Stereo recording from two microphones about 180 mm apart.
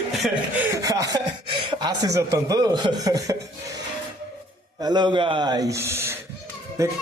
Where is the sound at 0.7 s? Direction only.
20° right (ahead or behind).